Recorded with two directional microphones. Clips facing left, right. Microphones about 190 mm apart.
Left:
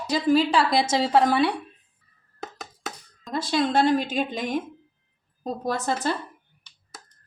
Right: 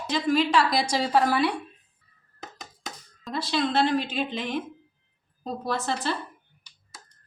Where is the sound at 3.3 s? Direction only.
45° left (ahead or behind).